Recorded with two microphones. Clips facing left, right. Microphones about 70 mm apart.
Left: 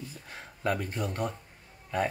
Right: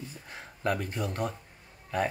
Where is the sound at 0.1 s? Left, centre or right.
Centre.